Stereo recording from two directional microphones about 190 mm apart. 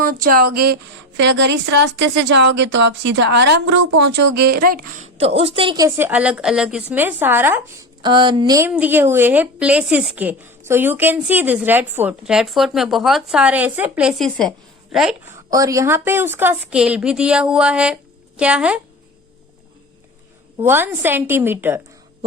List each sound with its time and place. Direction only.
0.0 s speech: 50° right (ahead or behind)
1.2 s a woman's voice: 70° right (ahead or behind); by 5.0 s 50° right (ahead or behind)
5.1 s a woman's voice: 30° right (ahead or behind); by 7.6 s 10° right (ahead or behind)
8.0 s a woman's voice: 25° right (ahead or behind); by 14.5 s centre (ahead or behind)
15.3 s a woman's voice: 20° right (ahead or behind)
20.6 s a woman's voice: 10° right (ahead or behind)